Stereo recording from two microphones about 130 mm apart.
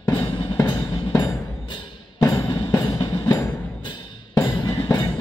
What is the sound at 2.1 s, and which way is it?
Music, 25° left (ahead or behind).